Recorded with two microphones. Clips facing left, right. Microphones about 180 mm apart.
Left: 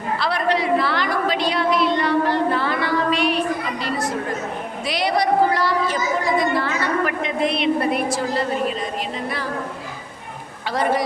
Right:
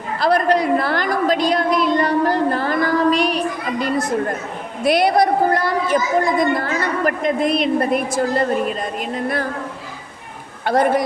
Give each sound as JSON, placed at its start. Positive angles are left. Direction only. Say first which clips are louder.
{"t": 0.2, "sound": "a sound", "louder": "right 7 dB", "side_deg": -45}
{"t": 4.8, "sound": "a woman's voice", "louder": "right 7 dB", "side_deg": -55}
{"t": 10.7, "sound": "a woman's voice", "louder": "right 5 dB", "side_deg": -50}